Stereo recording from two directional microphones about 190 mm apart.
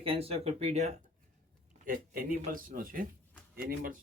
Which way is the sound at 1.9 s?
50° right (ahead or behind).